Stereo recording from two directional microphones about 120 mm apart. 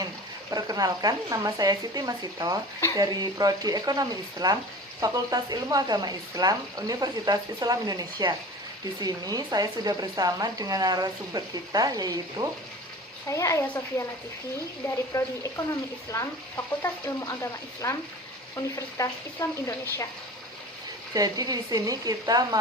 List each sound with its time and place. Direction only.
0.5 s speech: 30° right (ahead or behind)
13.2 s frying: 25° left (ahead or behind)
15.1 s frying: 25° left (ahead or behind)
18.9 s frying: 25° left (ahead or behind)
21.1 s speech: 30° right (ahead or behind)